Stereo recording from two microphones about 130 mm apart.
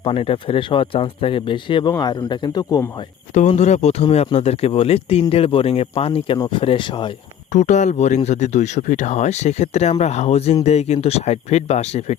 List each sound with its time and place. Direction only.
0.0 s speech: 45° left (ahead or behind)
3.3 s speech: 65° left (ahead or behind); by 7.1 s 40° left (ahead or behind)
7.5 s speech: 65° left (ahead or behind)